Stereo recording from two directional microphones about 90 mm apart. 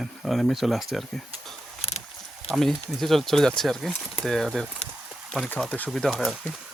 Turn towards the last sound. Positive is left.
turn(degrees=0)  # may be behind; listen again after turning